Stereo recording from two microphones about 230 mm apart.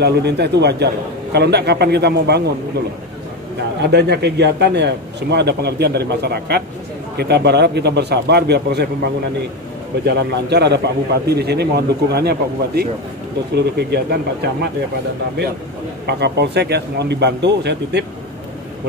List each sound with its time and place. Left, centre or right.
0.0 s a man's voice: right
3.8 s a man's voice: right
10.0 s a man's voice: right
16.1 s a man's voice: right